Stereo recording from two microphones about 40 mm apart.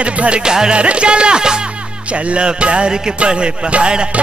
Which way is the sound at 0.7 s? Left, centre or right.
Right.